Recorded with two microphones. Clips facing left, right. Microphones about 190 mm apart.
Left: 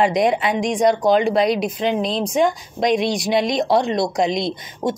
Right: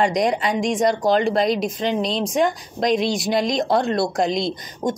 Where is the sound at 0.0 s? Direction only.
5° left (ahead or behind).